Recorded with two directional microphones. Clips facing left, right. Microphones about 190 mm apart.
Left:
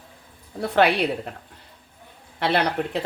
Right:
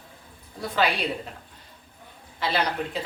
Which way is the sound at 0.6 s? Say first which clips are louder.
Left 6 dB; 65° left (ahead or behind).